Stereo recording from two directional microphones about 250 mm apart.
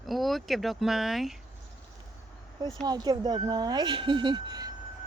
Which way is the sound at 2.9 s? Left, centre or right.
Centre.